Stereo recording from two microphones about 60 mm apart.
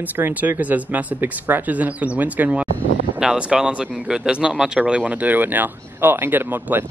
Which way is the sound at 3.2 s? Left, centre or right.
Centre.